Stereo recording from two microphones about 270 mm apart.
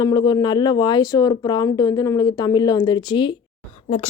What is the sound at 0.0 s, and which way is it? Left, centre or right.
Speech, centre.